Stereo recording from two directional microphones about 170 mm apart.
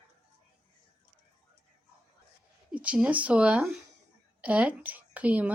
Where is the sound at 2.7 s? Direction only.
5° right (ahead or behind).